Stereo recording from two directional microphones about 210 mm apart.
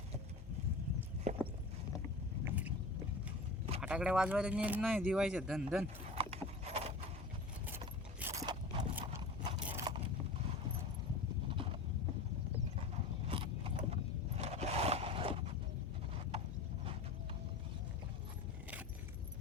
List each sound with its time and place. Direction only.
1.3 s clip-clop: 35° right (ahead or behind)
2.4 s boat: 10° right (ahead or behind)
3.8 s speech: 5° right (ahead or behind)
6.1 s clip-clop: 30° right (ahead or behind)
8.2 s a sound: 15° right (ahead or behind)
9.9 s vehicle: 20° right (ahead or behind)
11.4 s clip-clop: 25° right (ahead or behind)
13.2 s roaring cats: 25° right (ahead or behind)